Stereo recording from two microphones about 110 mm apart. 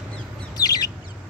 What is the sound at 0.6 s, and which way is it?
Bird, 35° left (ahead or behind).